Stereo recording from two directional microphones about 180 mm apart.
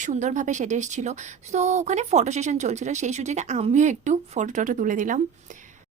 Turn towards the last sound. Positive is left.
turn(degrees=-45)  # may be behind; listen again after turning